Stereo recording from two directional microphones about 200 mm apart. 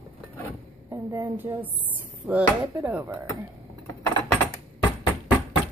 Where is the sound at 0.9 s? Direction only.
15° right (ahead or behind).